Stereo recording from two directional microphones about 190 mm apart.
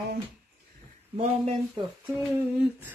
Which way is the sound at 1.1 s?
35° right (ahead or behind).